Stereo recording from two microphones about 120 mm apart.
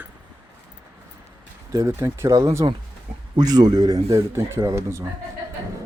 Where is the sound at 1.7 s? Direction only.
25° right (ahead or behind).